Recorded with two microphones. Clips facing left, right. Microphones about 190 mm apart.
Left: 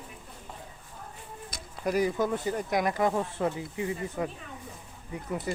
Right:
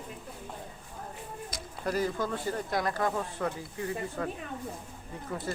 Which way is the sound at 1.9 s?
15° left (ahead or behind).